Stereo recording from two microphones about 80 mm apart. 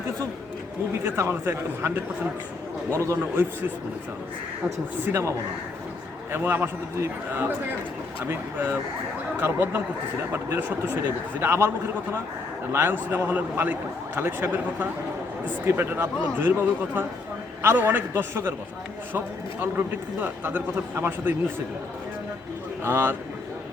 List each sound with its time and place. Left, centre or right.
1.0 s speech: right
2.9 s speech: right
5.1 s speech: right
6.3 s speech: right
12.7 s speech: right
22.8 s speech: right